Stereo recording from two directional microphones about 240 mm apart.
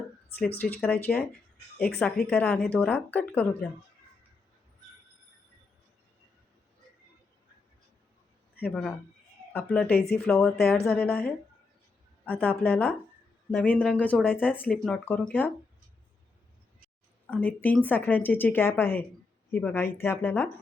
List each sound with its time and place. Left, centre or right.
0.3 s a woman's voice: centre
8.6 s a woman's voice: centre
9.9 s speech: left
10.2 s a woman's voice: centre
17.2 s speech: centre